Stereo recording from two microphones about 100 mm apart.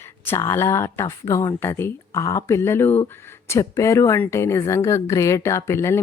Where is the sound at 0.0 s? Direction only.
25° left (ahead or behind).